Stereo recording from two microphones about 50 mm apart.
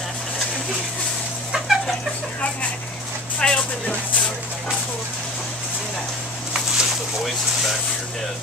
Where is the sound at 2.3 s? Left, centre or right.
Left.